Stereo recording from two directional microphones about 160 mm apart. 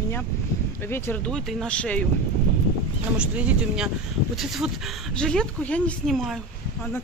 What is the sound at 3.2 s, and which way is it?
Speech, 5° right (ahead or behind).